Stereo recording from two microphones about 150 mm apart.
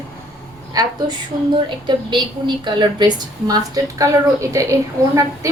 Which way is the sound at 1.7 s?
30° right (ahead or behind).